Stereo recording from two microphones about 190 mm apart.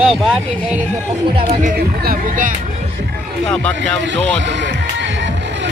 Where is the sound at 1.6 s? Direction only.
50° right (ahead or behind).